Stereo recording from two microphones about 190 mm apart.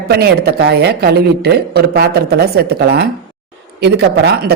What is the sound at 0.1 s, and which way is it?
Speech, 60° right (ahead or behind).